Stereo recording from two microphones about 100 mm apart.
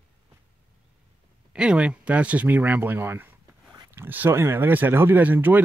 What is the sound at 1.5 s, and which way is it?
Speech, 10° right (ahead or behind).